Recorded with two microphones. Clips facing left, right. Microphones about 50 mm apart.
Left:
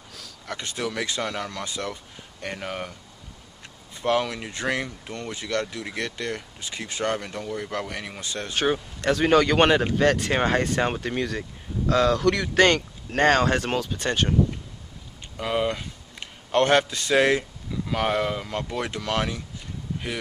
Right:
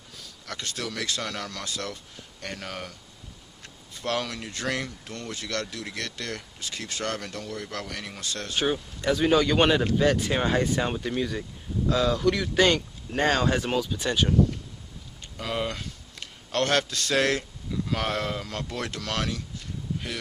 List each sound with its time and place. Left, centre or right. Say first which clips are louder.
0.5 s speech: left 4 dB; centre
9.3 s speech: left 3 dB; left
11.9 s speech: left 3 dB; left
15.3 s a man's voice: left 5 dB; centre